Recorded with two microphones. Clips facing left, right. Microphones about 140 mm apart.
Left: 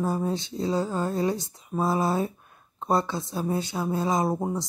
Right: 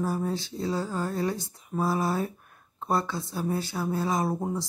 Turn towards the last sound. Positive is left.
turn(degrees=20)  # may be behind; listen again after turning